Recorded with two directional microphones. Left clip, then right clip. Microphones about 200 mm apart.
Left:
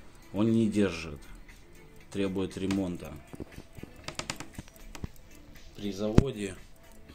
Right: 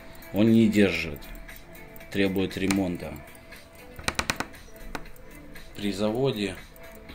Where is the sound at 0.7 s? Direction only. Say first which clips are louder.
Right 7 dB; 55° left (ahead or behind).